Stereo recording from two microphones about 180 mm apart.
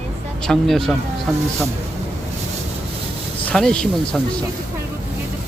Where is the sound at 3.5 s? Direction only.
5° left (ahead or behind).